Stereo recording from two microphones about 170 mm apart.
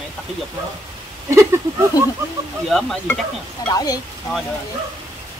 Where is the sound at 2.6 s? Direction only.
Centre (ahead or behind).